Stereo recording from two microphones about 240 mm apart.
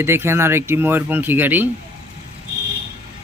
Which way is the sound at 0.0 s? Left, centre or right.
Centre.